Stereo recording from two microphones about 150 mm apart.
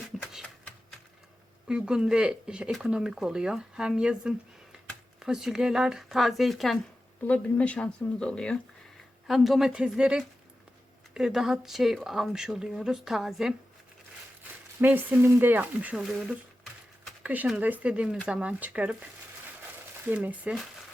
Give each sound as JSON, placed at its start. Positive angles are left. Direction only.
{"t": 0.2, "sound": "a sound", "side_deg": 0}
{"t": 1.6, "sound": "speech", "side_deg": -5}
{"t": 14.8, "sound": "speech", "side_deg": -10}
{"t": 20.1, "sound": "speech", "side_deg": -10}